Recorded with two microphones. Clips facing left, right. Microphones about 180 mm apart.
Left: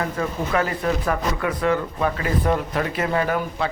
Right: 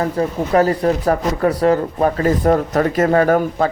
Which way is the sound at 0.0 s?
35° right (ahead or behind).